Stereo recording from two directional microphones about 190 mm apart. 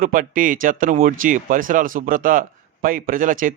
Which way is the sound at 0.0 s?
45° right (ahead or behind).